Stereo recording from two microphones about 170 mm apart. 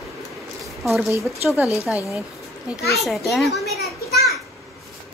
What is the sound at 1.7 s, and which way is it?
Speech, 15° left (ahead or behind).